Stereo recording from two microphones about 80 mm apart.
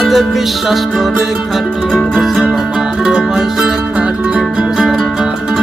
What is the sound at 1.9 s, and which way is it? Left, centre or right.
Music, centre.